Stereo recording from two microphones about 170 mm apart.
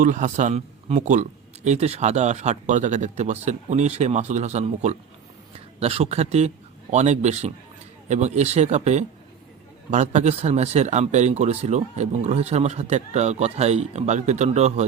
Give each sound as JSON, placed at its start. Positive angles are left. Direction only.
{"t": 0.0, "sound": "a man's voice", "side_deg": -50}